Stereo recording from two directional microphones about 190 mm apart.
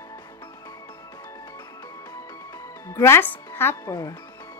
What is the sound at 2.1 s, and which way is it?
Music, 20° left (ahead or behind).